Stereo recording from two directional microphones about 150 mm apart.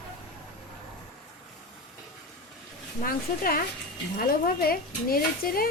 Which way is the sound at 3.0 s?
75° left (ahead or behind).